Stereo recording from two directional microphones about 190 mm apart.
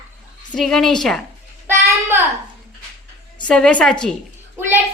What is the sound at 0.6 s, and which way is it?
Speech, centre (ahead or behind).